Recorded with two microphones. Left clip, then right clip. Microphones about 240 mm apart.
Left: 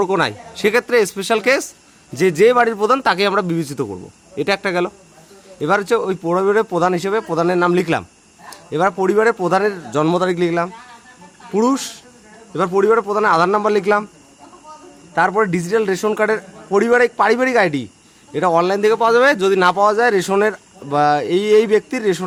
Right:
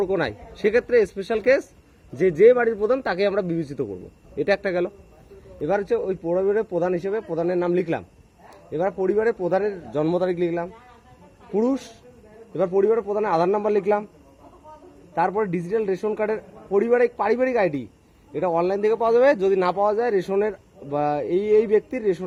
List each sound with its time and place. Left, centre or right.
0.0 s speech: centre
15.1 s speech: centre